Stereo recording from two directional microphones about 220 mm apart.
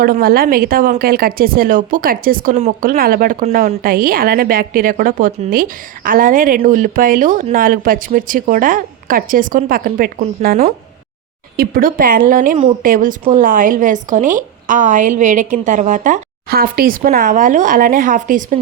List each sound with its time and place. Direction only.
0.0 s a woman's voice: 40° right (ahead or behind)